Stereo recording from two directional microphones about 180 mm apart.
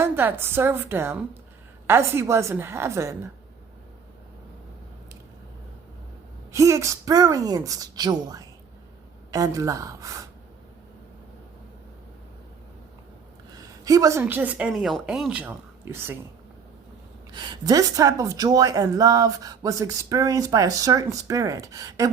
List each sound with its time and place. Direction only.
0.0 s a woman's voice: 10° right (ahead or behind)
6.5 s speech: 15° right (ahead or behind)
13.5 s a woman's voice: 20° right (ahead or behind)
17.3 s speech: 25° right (ahead or behind)